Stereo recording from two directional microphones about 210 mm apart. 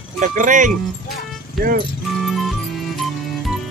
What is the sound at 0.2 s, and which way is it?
Speech, 40° right (ahead or behind).